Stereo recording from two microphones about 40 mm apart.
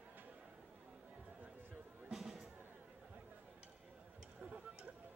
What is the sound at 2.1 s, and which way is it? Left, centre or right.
Music, centre.